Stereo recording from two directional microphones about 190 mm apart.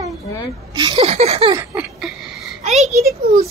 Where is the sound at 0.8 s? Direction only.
30° right (ahead or behind).